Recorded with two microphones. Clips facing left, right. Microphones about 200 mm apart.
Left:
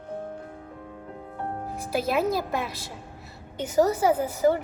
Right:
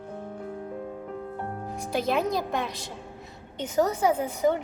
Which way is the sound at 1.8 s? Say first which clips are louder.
Left 1 dB; 5° left (ahead or behind).